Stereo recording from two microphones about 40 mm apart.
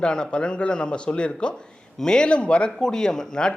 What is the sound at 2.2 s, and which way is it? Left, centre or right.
Speech, left.